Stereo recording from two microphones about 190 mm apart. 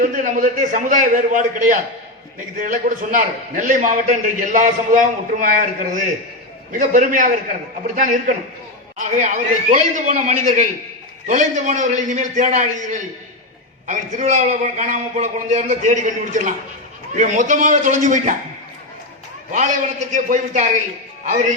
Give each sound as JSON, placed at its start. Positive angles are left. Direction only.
{"t": 0.0, "sound": "a man's voice", "side_deg": -45}
{"t": 19.5, "sound": "a man's voice", "side_deg": -40}